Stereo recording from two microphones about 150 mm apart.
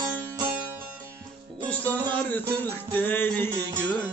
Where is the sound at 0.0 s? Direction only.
20° right (ahead or behind).